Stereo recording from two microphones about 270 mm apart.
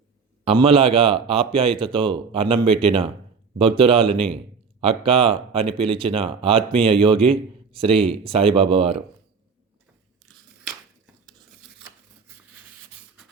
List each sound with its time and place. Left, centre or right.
0.4 s speech: right